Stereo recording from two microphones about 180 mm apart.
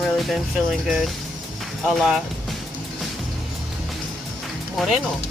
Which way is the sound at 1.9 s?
Centre (ahead or behind).